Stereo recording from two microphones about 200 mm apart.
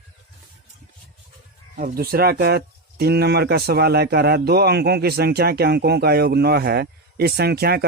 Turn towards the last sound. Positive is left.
turn(degrees=-50)  # may be behind; listen again after turning